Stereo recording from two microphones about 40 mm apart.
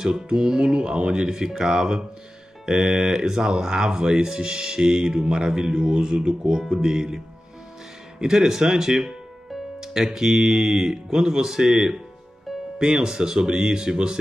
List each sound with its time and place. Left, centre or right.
0.0 s speech: centre
8.2 s speech: centre